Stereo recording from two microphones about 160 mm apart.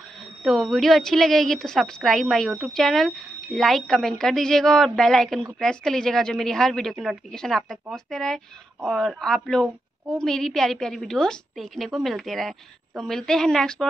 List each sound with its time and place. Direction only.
0.4 s a woman's voice: centre (ahead or behind)